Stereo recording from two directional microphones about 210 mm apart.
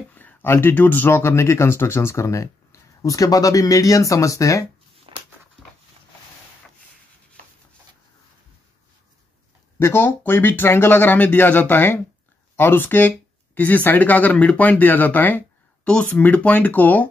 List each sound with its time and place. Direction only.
0.1 s speech: 10° left (ahead or behind)
5.1 s dog: 25° right (ahead or behind)
9.8 s speech: 10° left (ahead or behind)